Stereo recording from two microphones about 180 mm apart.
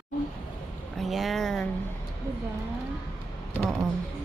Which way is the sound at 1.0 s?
Centre (ahead or behind).